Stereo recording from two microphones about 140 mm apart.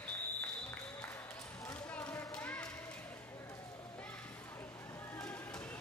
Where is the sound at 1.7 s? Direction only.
10° left (ahead or behind).